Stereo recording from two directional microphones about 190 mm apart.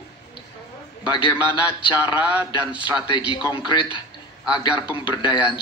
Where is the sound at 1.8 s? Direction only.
25° left (ahead or behind).